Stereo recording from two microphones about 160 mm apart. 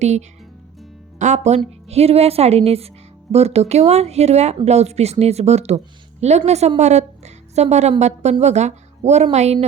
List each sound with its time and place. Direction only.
0.0 s a woman's voice: 45° right (ahead or behind)